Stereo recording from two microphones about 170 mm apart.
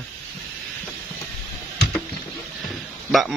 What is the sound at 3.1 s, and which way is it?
Speech, centre (ahead or behind).